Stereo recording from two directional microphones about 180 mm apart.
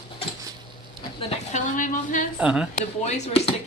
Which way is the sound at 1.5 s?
45° left (ahead or behind).